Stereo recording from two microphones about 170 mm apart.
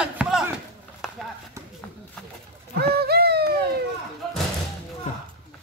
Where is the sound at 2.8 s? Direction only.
65° right (ahead or behind).